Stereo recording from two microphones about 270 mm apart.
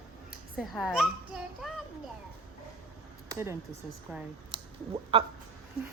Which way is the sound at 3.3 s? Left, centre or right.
Centre.